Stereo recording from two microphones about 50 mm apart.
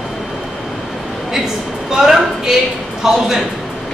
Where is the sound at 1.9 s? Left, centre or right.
Centre.